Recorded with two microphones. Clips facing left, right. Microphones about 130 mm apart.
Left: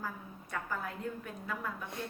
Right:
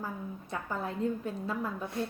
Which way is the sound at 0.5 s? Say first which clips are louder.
Right 3 dB; 25° right (ahead or behind).